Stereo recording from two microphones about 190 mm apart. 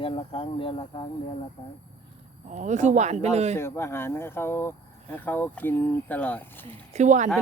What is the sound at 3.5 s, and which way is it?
Speech, 15° left (ahead or behind).